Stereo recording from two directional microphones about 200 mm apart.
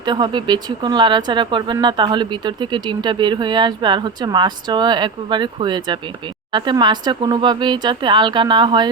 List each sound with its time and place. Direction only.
0.0 s speech: 20° right (ahead or behind)